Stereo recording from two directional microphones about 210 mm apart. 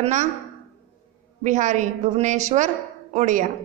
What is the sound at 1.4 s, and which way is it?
A woman's voice, 35° right (ahead or behind).